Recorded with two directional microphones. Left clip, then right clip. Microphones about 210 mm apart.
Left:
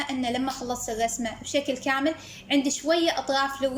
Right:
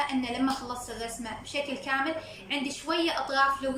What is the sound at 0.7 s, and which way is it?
A woman's voice, 40° left (ahead or behind).